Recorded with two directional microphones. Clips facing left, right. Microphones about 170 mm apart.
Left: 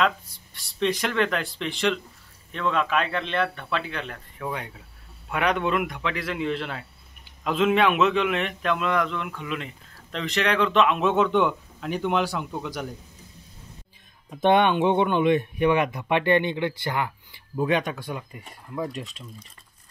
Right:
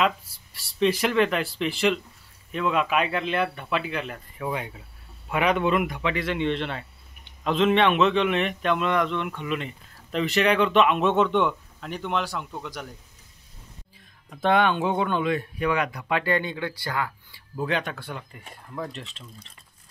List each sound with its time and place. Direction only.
0.0 s speech: 5° right (ahead or behind)
14.3 s speech: 20° left (ahead or behind)